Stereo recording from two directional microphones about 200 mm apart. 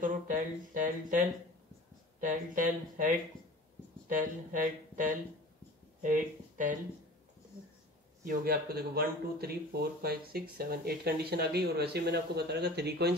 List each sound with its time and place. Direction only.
0.0 s a sound: 40° right (ahead or behind)
2.1 s speech: 40° right (ahead or behind)
4.2 s speech: 40° right (ahead or behind)
6.0 s speech: 40° right (ahead or behind)
8.2 s speech: 45° right (ahead or behind)